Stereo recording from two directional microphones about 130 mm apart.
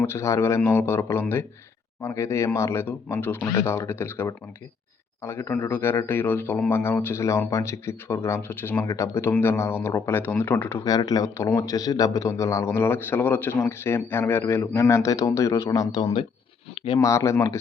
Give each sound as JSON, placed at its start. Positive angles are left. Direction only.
{"t": 0.0, "sound": "a man's voice", "side_deg": 20}
{"t": 10.8, "sound": "a man's voice", "side_deg": 30}